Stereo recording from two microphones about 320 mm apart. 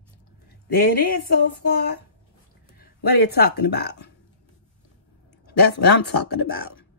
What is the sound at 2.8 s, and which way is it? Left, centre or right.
Speech, left.